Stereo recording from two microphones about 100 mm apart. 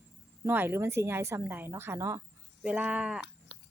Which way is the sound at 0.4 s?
20° right (ahead or behind).